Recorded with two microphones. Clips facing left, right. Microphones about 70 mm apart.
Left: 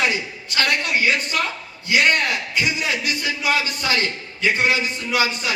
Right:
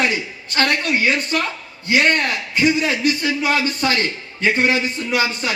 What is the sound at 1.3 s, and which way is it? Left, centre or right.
A man's voice, right.